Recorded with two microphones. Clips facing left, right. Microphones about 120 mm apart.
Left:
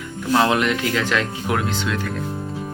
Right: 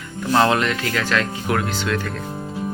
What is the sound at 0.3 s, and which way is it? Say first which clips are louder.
Speech: even; 10° left (ahead or behind).